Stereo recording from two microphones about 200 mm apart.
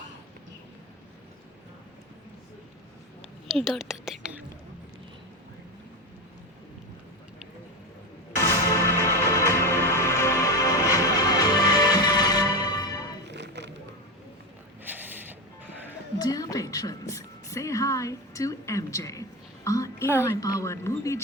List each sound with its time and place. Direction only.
3.5 s speech: centre (ahead or behind)
8.4 s music: 15° left (ahead or behind)
13.2 s music: 60° right (ahead or behind)
14.8 s music: 10° right (ahead or behind)
16.1 s a sound: 20° left (ahead or behind)
19.6 s music: 15° left (ahead or behind)
20.2 s a sound: 15° left (ahead or behind)